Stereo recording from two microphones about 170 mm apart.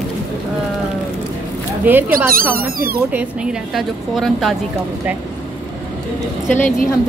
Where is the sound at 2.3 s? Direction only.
60° right (ahead or behind).